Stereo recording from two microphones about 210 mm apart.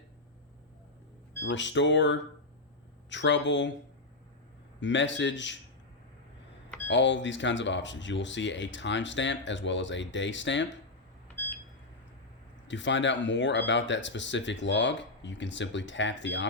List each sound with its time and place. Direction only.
1.5 s speech: 60° left (ahead or behind)
4.8 s speech: 60° left (ahead or behind)
6.8 s speech: 60° left (ahead or behind)
12.6 s speech: 60° left (ahead or behind)